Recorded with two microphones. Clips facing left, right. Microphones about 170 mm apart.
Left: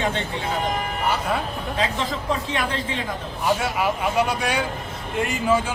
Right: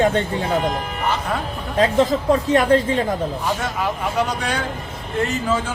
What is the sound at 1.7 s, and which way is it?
Speech, 45° right (ahead or behind).